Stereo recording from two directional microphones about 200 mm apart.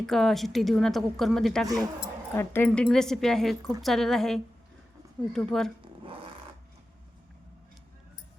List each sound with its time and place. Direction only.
0.0 s a woman's voice: centre (ahead or behind)
2.3 s a woman's voice: 10° left (ahead or behind)
6.0 s filing: 25° right (ahead or behind)